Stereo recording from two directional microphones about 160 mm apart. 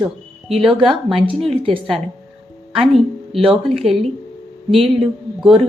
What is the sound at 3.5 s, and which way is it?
Speech, centre (ahead or behind).